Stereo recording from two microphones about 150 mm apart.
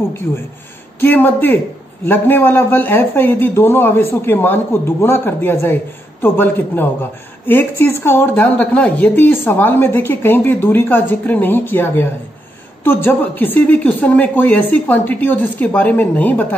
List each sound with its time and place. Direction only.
0.9 s a woman's voice: 15° left (ahead or behind)